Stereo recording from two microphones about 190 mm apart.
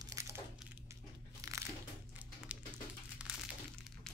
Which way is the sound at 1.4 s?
15° right (ahead or behind).